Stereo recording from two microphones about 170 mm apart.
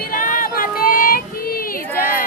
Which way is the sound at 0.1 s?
55° left (ahead or behind).